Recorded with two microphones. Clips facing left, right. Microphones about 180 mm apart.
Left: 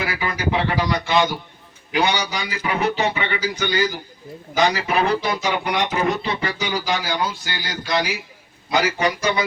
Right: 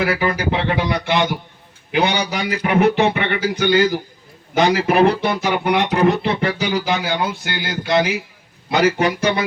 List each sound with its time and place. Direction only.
0.0 s speech: 60° right (ahead or behind)